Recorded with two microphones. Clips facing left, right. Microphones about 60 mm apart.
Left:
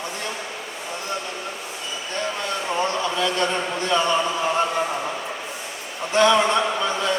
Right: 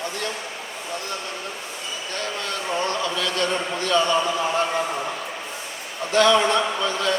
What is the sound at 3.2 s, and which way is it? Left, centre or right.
Speech, left.